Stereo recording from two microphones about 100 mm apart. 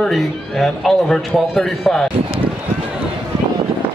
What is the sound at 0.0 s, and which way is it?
A man's voice, centre (ahead or behind).